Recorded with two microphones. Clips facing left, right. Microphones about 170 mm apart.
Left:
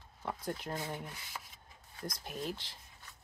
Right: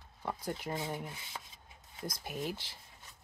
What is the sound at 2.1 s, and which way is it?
Speech, 5° right (ahead or behind).